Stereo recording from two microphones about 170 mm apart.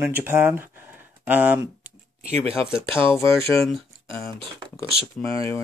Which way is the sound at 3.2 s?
15° left (ahead or behind).